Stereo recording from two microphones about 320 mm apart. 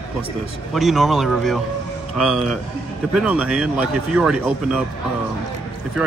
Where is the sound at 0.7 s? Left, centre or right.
Centre.